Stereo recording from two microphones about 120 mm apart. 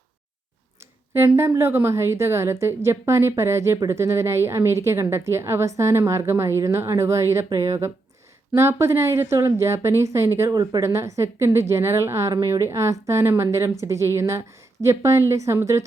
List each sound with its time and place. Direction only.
1.4 s a woman's voice: 20° right (ahead or behind)